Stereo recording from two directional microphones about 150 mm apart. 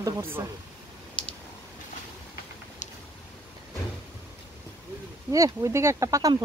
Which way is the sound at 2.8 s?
55° left (ahead or behind).